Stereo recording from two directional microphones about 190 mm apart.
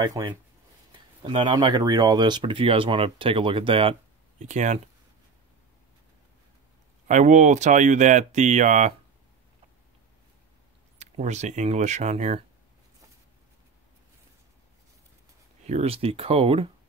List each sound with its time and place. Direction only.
0.2 s speech: 20° right (ahead or behind)
4.4 s speech: 40° right (ahead or behind)
7.1 s speech: 40° right (ahead or behind)
11.0 s speech: 35° right (ahead or behind)
15.6 s speech: 35° right (ahead or behind)